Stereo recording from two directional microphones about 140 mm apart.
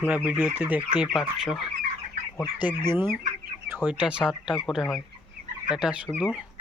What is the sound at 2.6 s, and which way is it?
Speech, 15° right (ahead or behind).